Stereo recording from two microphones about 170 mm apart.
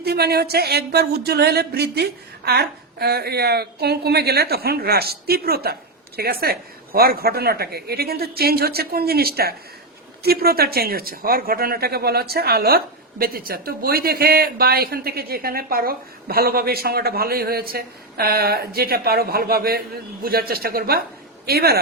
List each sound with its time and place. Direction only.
0.0 s speech: 70° right (ahead or behind)